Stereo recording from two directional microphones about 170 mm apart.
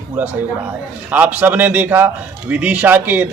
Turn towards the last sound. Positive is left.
turn(degrees=-10)  # may be behind; listen again after turning